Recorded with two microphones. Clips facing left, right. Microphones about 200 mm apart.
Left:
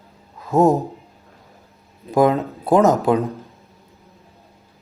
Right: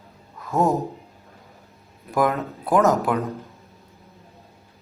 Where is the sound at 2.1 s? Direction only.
25° left (ahead or behind).